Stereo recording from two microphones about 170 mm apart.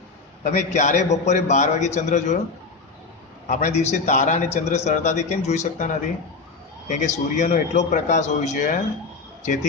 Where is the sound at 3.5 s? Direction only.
40° left (ahead or behind).